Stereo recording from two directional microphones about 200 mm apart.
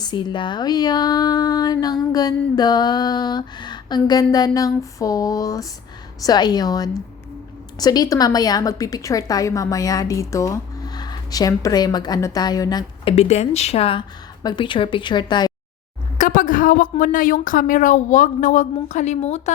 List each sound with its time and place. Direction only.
0.0 s a woman's voice: 20° left (ahead or behind)
13.1 s speech: 35° left (ahead or behind)
16.1 s a woman's voice: 40° left (ahead or behind)